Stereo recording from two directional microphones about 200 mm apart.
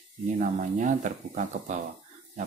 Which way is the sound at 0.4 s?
40° right (ahead or behind).